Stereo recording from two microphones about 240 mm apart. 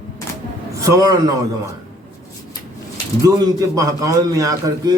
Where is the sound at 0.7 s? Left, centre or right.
Centre.